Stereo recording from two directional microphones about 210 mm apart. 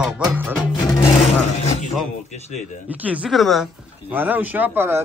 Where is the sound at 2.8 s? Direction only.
5° right (ahead or behind).